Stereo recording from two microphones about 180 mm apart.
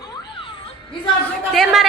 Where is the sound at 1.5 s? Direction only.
Centre (ahead or behind).